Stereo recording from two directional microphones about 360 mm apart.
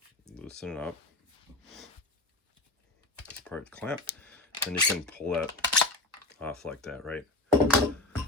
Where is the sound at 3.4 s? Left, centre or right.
Centre.